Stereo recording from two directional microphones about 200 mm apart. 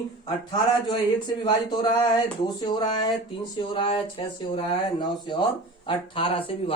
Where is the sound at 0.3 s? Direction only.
20° left (ahead or behind).